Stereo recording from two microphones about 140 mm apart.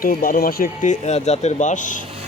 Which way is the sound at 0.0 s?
90° left.